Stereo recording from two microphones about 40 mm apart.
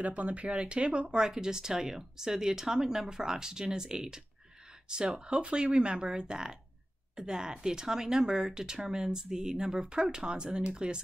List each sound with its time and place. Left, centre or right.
0.0 s speech: right